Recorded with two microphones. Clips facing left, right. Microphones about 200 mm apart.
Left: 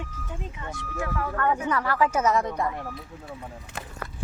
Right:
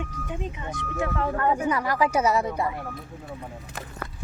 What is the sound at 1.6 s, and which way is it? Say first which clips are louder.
A woman's voice: right 1 dB; 15° right (ahead or behind).